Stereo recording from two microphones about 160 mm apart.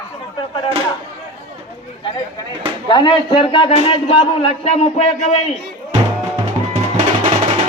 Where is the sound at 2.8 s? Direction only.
30° left (ahead or behind).